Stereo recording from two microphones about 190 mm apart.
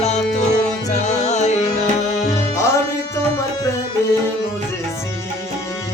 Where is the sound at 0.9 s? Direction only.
35° left (ahead or behind).